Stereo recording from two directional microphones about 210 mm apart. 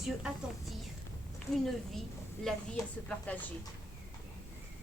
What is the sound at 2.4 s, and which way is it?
A woman's voice, centre (ahead or behind).